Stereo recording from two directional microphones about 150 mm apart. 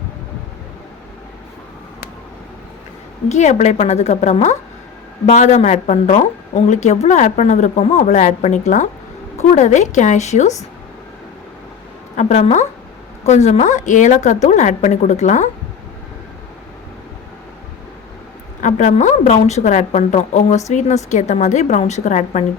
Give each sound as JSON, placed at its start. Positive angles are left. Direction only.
{"t": 3.2, "sound": "speech", "side_deg": 50}
{"t": 12.1, "sound": "speech", "side_deg": 50}
{"t": 18.6, "sound": "speech", "side_deg": 50}